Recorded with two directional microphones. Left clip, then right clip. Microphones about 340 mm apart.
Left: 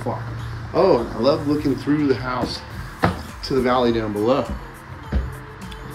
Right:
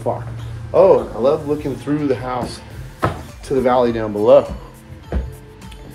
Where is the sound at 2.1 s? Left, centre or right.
Centre.